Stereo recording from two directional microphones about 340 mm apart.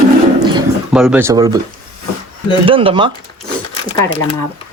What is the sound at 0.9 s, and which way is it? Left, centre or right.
Speech, centre.